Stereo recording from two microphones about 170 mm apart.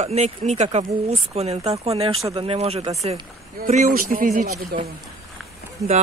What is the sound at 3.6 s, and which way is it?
Speech, 50° right (ahead or behind).